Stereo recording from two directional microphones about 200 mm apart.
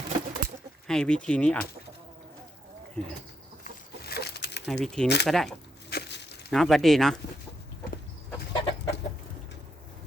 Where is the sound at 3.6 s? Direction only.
50° left (ahead or behind).